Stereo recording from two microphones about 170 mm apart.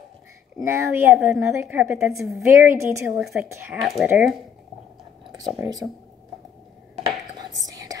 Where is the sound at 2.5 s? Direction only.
15° right (ahead or behind).